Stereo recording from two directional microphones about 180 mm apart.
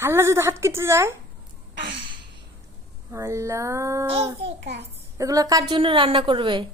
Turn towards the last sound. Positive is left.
turn(degrees=-25)  # may be behind; listen again after turning